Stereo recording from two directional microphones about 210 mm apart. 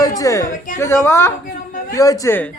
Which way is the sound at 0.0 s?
15° left (ahead or behind).